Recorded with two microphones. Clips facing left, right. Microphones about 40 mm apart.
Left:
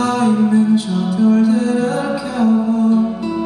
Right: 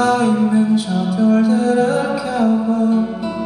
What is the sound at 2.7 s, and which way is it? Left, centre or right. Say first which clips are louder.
Music: left 2 dB; centre.